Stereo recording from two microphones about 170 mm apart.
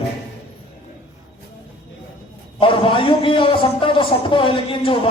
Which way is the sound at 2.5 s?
30° left (ahead or behind).